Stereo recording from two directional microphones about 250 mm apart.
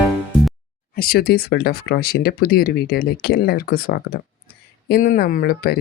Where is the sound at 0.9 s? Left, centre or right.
Left.